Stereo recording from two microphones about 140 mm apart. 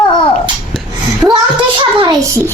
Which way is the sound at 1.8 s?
35° right (ahead or behind).